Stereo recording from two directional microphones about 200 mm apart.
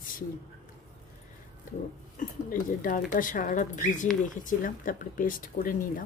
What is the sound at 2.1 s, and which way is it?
Speech, 45° left (ahead or behind).